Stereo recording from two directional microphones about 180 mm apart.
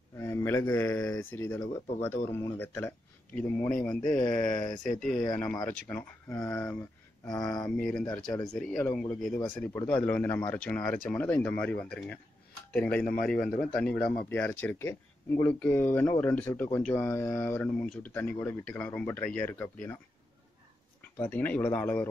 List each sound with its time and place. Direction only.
0.2 s speech: 15° left (ahead or behind)
7.7 s speech: 5° left (ahead or behind)
9.7 s speech: 10° left (ahead or behind)
21.2 s speech: 10° left (ahead or behind)